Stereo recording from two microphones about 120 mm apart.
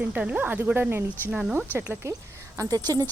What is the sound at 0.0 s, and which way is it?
Speech, 10° right (ahead or behind).